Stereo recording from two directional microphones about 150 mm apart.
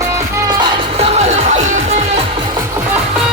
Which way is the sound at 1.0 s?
45° right (ahead or behind).